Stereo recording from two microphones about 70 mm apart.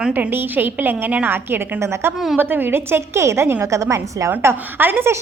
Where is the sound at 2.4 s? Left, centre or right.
Right.